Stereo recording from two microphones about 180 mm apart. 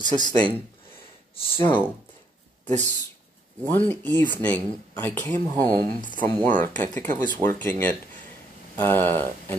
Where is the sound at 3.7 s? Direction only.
10° left (ahead or behind).